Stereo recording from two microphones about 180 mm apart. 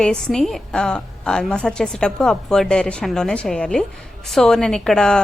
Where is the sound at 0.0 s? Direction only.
5° left (ahead or behind).